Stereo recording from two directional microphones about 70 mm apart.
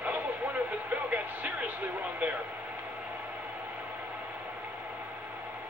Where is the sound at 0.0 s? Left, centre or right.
Right.